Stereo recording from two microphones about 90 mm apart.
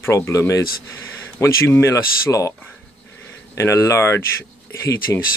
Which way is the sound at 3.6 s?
35° left (ahead or behind).